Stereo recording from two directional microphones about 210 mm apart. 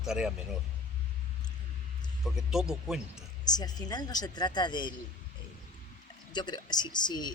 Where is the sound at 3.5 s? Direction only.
20° left (ahead or behind).